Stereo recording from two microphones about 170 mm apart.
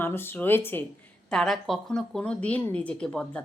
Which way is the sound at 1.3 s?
Centre (ahead or behind).